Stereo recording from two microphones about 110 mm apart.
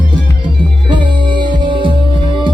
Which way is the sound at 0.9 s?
45° right (ahead or behind).